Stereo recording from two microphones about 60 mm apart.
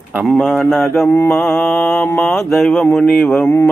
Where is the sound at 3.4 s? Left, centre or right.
Left.